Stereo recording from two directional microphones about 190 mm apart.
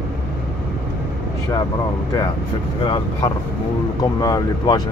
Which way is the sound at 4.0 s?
20° left (ahead or behind).